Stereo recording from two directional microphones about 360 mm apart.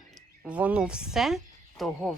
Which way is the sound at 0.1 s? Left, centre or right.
Centre.